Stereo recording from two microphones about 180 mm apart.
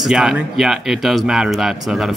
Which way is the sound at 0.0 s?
Centre (ahead or behind).